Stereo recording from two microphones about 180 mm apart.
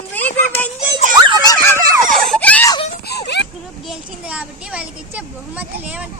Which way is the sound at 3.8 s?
5° right (ahead or behind).